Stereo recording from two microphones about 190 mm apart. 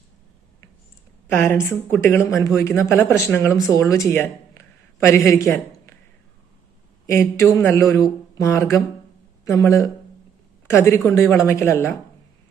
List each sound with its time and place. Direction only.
1.3 s speech: 10° left (ahead or behind)
7.1 s speech: 15° left (ahead or behind)